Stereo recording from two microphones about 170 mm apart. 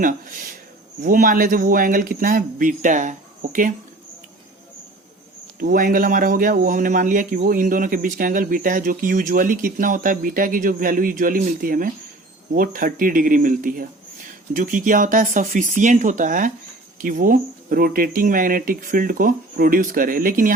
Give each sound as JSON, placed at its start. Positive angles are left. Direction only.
{"t": 0.0, "sound": "a man's voice", "side_deg": -50}
{"t": 5.5, "sound": "a man's voice", "side_deg": -55}